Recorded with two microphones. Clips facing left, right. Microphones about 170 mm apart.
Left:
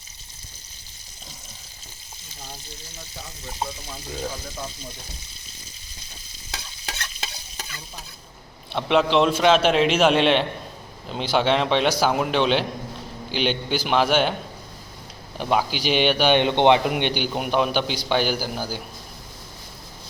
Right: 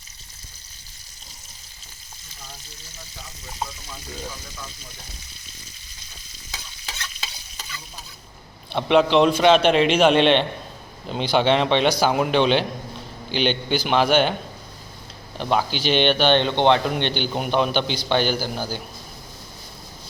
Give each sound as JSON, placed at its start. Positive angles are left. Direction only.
{"t": 6.5, "sound": "stir", "side_deg": 60}
{"t": 8.7, "sound": "a man's voice", "side_deg": 0}
{"t": 15.4, "sound": "speech", "side_deg": 5}